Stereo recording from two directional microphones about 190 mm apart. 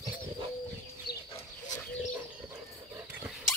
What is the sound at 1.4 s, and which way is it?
Bird, 20° left (ahead or behind).